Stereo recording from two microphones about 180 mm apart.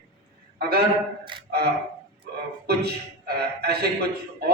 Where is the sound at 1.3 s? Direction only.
25° right (ahead or behind).